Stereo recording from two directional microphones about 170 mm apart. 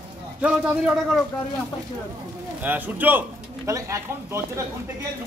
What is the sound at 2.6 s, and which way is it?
A man's voice, 10° right (ahead or behind).